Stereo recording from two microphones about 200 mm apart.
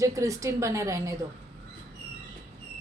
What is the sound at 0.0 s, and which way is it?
Speech, 15° right (ahead or behind).